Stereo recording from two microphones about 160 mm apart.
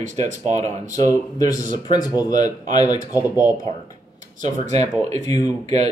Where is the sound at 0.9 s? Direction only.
20° left (ahead or behind).